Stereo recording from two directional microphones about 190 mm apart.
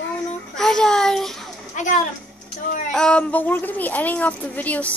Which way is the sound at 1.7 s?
40° left (ahead or behind).